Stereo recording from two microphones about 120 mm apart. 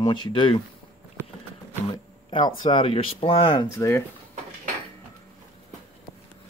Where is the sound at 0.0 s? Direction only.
40° left (ahead or behind).